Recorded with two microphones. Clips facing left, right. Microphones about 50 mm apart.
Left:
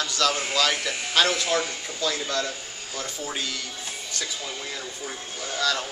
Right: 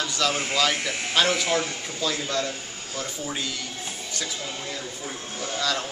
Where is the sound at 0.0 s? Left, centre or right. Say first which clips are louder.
Left 1 dB; centre.